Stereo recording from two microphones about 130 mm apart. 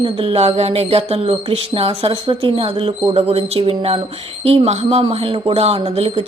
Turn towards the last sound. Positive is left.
turn(degrees=-50)  # may be behind; listen again after turning